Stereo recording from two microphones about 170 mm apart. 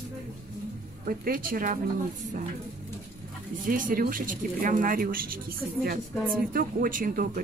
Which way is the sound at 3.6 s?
55° right (ahead or behind).